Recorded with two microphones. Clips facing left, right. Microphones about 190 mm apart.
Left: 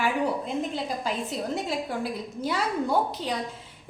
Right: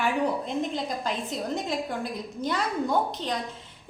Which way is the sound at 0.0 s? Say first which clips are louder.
Even; 5° left (ahead or behind).